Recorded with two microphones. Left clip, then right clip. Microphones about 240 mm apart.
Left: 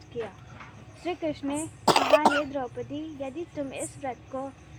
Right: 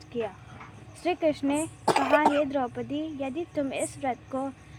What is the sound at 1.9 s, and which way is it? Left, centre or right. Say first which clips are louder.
Speech: left 2 dB; left.